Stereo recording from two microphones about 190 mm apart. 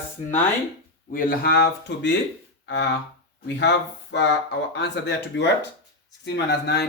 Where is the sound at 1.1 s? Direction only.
50° left (ahead or behind).